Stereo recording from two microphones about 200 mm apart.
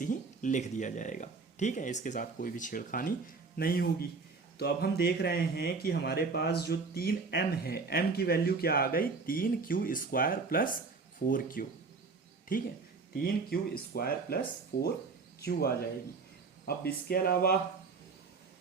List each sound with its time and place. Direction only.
0.0 s speech: 40° left (ahead or behind)
13.1 s speech: 50° left (ahead or behind)
15.4 s speech: 50° left (ahead or behind)